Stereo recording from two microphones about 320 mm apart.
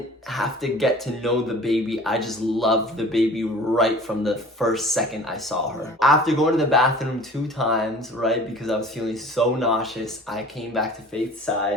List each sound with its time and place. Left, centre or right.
0.3 s speech: centre